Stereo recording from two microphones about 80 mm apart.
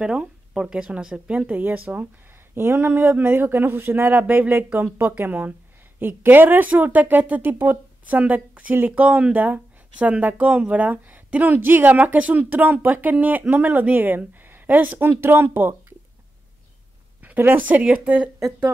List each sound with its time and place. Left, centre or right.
0.0 s speech: centre
2.5 s speech: right
17.2 s a sound: right
17.6 s speech: centre